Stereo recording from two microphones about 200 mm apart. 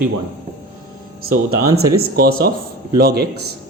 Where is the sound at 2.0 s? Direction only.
50° right (ahead or behind).